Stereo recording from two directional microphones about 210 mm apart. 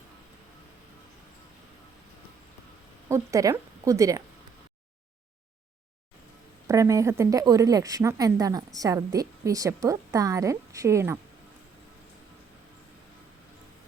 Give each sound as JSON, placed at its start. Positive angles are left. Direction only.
{"t": 3.1, "sound": "speech", "side_deg": -15}
{"t": 6.7, "sound": "a woman's voice", "side_deg": -15}